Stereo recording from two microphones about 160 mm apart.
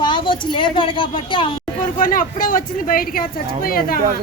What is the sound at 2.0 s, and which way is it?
Speech, 60° left (ahead or behind).